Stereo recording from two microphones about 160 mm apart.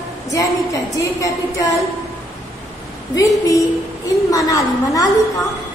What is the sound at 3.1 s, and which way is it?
A woman's voice, 20° left (ahead or behind).